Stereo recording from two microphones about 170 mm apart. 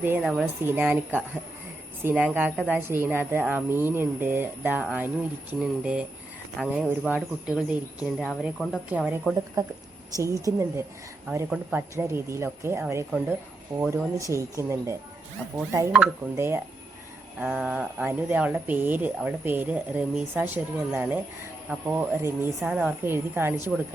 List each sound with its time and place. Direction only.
0.2 s speech: centre (ahead or behind)
0.6 s speech: 10° right (ahead or behind)
8.2 s speech: 5° left (ahead or behind)
8.9 s speech: 5° right (ahead or behind)
9.6 s a woman's voice: 20° right (ahead or behind)
16.3 s speech: 15° right (ahead or behind)